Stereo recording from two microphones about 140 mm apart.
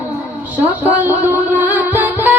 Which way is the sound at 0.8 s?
10° right (ahead or behind).